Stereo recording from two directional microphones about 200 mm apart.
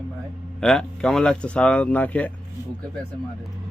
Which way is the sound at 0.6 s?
5° left (ahead or behind).